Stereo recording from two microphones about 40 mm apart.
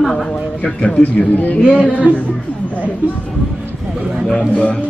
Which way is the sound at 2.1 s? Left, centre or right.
Right.